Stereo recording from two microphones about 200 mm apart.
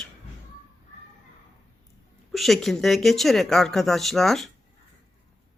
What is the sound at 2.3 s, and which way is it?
Speech, centre (ahead or behind).